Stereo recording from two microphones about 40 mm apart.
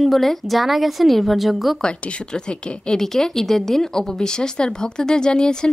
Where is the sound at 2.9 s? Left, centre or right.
Centre.